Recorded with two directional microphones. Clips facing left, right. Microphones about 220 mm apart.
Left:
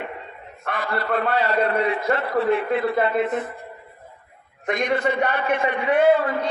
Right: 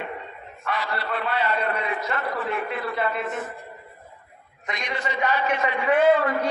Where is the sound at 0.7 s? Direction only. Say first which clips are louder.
Left 4 dB; 55° left (ahead or behind).